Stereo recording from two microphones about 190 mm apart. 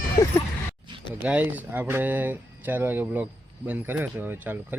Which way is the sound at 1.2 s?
10° right (ahead or behind).